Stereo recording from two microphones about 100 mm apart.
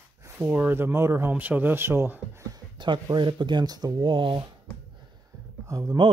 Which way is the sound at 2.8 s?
50° right (ahead or behind).